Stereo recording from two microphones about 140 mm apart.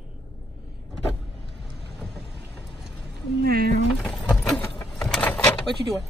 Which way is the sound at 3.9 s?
5° left (ahead or behind).